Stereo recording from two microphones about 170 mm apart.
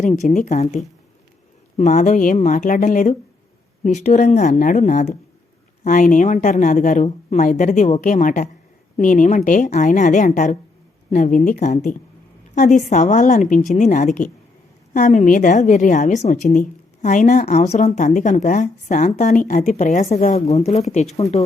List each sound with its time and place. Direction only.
0.0 s a woman's voice: 45° left (ahead or behind)